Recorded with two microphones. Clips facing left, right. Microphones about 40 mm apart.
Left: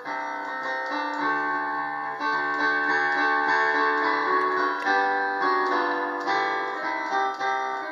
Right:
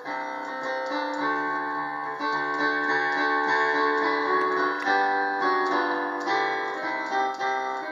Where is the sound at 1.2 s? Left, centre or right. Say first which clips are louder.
Left 2 dB; centre.